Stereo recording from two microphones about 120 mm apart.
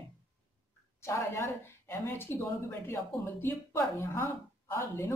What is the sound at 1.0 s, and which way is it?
Speech, 25° left (ahead or behind).